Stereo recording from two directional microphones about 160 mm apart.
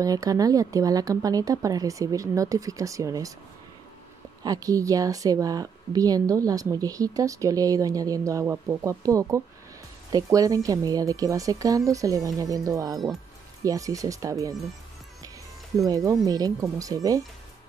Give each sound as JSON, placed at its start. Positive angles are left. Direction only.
{"t": 0.0, "sound": "a woman's voice", "side_deg": -20}
{"t": 4.4, "sound": "a woman's voice", "side_deg": -25}
{"t": 15.8, "sound": "a woman's voice", "side_deg": -20}